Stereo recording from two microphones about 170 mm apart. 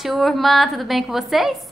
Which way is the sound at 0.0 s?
Centre (ahead or behind).